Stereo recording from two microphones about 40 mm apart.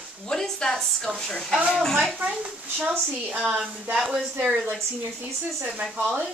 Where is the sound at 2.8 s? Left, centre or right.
Right.